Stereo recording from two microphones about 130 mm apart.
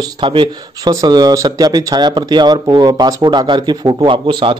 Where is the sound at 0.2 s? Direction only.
40° right (ahead or behind).